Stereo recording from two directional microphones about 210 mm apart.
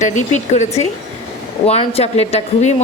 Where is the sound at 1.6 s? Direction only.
30° left (ahead or behind).